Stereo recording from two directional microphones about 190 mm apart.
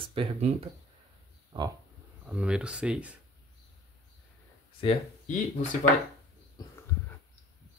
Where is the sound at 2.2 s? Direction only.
5° right (ahead or behind).